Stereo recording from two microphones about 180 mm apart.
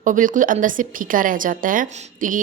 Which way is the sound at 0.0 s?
45° right (ahead or behind).